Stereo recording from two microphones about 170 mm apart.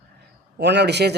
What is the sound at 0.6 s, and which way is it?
Speech, 90° right.